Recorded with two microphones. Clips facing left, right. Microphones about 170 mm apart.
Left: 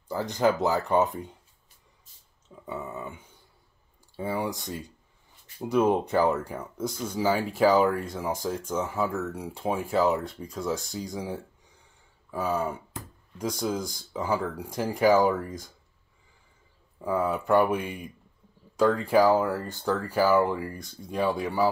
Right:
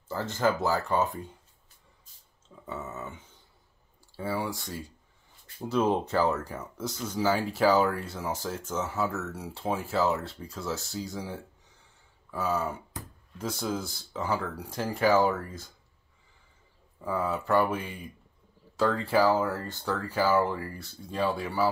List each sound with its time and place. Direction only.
0.1 s speech: 15° left (ahead or behind)
2.4 s a sound: 15° left (ahead or behind)
4.2 s speech: 20° left (ahead or behind)
12.3 s a sound: 10° left (ahead or behind)
13.8 s speech: 10° left (ahead or behind)
17.0 s speech: 15° left (ahead or behind)